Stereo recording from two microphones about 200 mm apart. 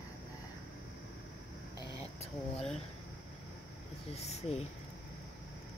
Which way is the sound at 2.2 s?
30° left (ahead or behind).